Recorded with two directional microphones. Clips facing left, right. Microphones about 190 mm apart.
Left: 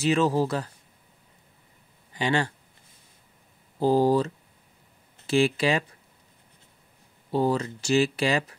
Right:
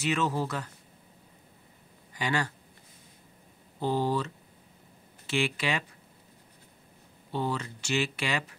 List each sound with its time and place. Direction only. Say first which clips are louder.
0.0 s speech: left 6 dB; 35° left (ahead or behind)
2.1 s speech: left 5 dB; 25° left (ahead or behind)
3.8 s speech: left 8 dB; 40° left (ahead or behind)
7.3 s speech: left 8 dB; 40° left (ahead or behind)